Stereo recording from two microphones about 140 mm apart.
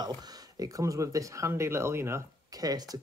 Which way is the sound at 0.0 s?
30° right (ahead or behind).